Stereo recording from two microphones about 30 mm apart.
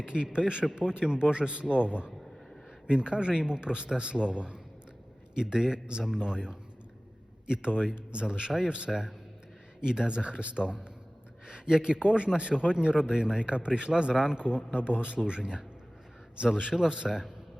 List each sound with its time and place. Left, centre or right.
0.0 s a man's voice: right
11.4 s a sound: right
12.0 s a man's voice: right
14.4 s a man's voice: right